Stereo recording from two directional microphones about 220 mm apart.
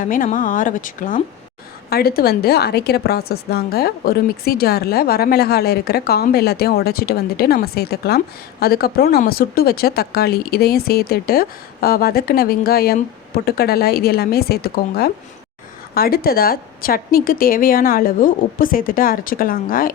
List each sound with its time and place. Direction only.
0.0 s a woman's voice: 35° left (ahead or behind)